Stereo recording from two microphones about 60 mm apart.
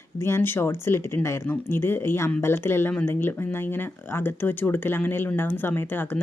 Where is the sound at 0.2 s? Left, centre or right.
Left.